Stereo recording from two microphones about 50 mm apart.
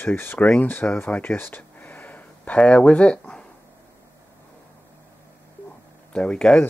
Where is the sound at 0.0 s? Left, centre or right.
Left.